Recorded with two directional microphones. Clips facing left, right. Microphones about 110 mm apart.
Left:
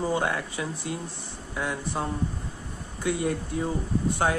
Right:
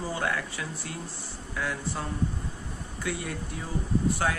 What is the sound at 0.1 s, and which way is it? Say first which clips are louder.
Speech: left 4 dB; 25° left (ahead or behind).